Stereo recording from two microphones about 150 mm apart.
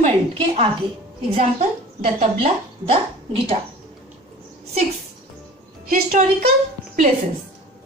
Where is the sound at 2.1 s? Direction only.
40° right (ahead or behind).